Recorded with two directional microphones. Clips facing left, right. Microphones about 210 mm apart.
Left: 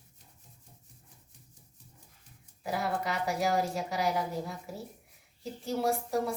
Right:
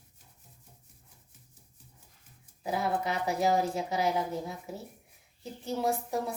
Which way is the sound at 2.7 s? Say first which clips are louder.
Right 2 dB; 20° right (ahead or behind).